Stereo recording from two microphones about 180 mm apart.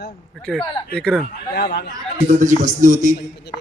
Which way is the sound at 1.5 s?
65° left (ahead or behind).